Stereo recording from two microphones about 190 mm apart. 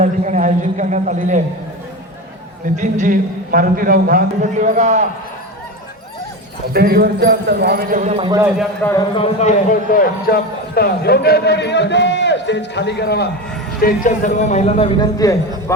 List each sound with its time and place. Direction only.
0.0 s a sound: 40° right (ahead or behind)
2.7 s a man's voice: 40° right (ahead or behind)
6.7 s a man's voice: 55° right (ahead or behind); by 8.3 s 35° right (ahead or behind)
8.8 s speech: 15° left (ahead or behind)
9.1 s a man's voice: 35° left (ahead or behind); by 13.3 s 60° left (ahead or behind)
13.7 s a man's voice: 45° left (ahead or behind)
14.9 s a man's voice: 20° left (ahead or behind)